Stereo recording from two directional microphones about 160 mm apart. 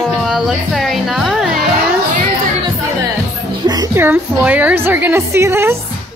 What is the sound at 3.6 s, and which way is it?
Music, 25° right (ahead or behind).